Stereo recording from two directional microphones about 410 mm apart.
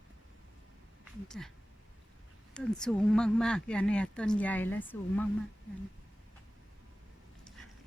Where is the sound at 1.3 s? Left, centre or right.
Centre.